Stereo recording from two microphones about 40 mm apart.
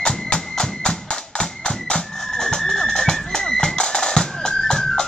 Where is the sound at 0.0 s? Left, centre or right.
Centre.